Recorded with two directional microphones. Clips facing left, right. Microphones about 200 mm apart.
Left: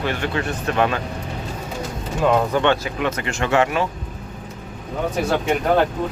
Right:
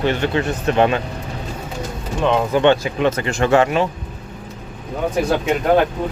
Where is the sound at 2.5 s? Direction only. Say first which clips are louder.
Right 4 dB; 20° right (ahead or behind).